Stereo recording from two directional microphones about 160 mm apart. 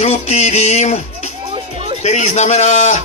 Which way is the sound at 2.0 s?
45° left (ahead or behind).